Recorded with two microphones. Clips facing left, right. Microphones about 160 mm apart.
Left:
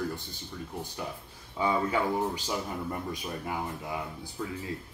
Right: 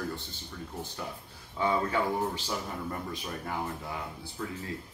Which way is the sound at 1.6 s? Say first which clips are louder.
Left 1 dB; 15° left (ahead or behind).